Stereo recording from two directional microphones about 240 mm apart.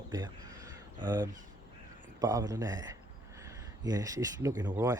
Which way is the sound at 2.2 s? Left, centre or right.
Centre.